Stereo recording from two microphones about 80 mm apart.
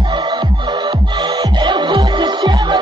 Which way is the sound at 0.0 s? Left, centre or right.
Right.